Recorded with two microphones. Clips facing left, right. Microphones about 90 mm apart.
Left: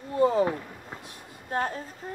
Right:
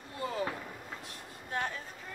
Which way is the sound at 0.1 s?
30° left (ahead or behind).